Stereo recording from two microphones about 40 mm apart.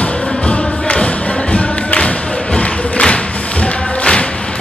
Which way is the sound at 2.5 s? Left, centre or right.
Left.